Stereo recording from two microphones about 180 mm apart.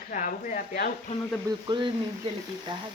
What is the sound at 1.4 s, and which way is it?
Speech, 25° right (ahead or behind).